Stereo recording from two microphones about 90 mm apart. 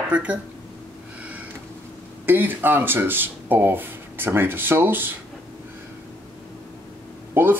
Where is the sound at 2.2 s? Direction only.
20° right (ahead or behind).